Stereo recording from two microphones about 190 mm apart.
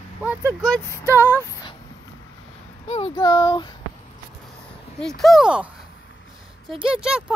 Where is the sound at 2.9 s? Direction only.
25° left (ahead or behind).